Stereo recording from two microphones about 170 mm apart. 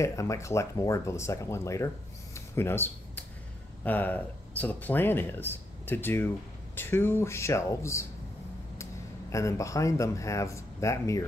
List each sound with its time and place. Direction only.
0.0 s speech: 20° left (ahead or behind)
2.3 s a sound: 15° left (ahead or behind)
3.8 s speech: 10° left (ahead or behind)
9.3 s speech: 15° left (ahead or behind)